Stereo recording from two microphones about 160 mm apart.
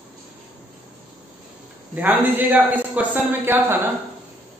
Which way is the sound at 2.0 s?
10° right (ahead or behind).